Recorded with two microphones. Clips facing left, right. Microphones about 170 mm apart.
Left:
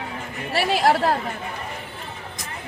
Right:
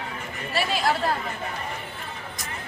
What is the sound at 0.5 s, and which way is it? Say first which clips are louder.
Chatter: left 5 dB; 75° left (ahead or behind).